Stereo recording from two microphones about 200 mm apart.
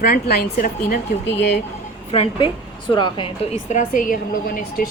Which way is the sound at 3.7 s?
40° left (ahead or behind).